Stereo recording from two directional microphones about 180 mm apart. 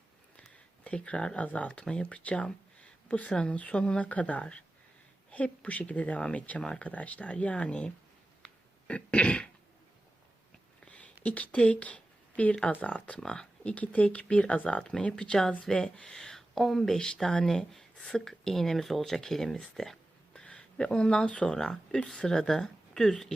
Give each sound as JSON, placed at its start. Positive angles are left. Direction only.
{"t": 0.4, "sound": "speech", "side_deg": 5}
{"t": 10.9, "sound": "speech", "side_deg": 5}